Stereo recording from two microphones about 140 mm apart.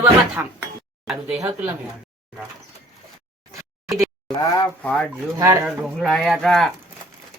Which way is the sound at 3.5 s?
25° right (ahead or behind).